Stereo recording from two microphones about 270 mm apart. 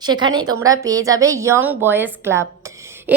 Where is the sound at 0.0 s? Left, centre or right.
Centre.